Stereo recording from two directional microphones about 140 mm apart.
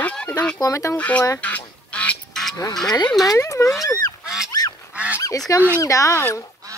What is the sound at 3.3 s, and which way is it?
Speech, 25° left (ahead or behind).